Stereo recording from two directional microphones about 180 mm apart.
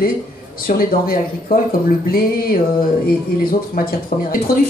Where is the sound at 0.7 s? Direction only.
55° left (ahead or behind).